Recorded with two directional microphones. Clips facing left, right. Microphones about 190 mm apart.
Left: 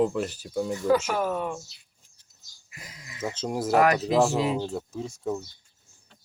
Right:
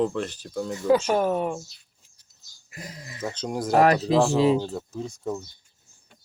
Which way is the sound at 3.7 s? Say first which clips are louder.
Right 2 dB; 30° right (ahead or behind).